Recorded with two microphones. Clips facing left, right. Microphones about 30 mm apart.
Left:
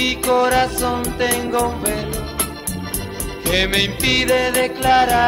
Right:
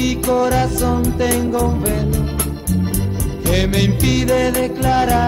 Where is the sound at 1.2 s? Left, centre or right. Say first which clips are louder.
Right 2 dB; left.